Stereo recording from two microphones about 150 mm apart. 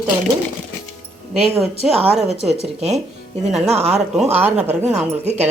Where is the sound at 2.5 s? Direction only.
45° right (ahead or behind).